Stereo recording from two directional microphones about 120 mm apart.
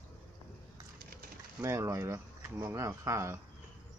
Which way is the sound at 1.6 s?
25° right (ahead or behind).